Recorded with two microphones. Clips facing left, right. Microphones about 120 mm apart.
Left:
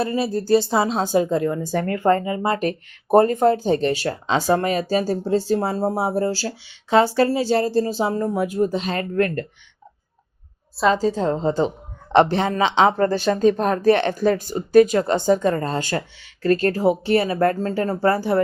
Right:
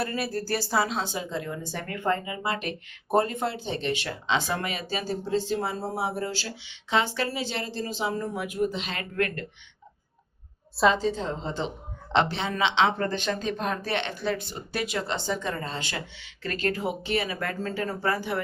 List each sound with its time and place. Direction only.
0.0 s speech: 20° left (ahead or behind)
0.9 s speech: 45° left (ahead or behind)
10.9 s speech: 40° left (ahead or behind)